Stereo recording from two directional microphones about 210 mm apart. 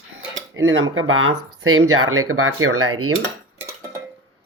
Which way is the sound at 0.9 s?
75° right (ahead or behind).